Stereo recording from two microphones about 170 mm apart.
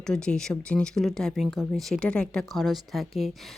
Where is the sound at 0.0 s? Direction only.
5° left (ahead or behind).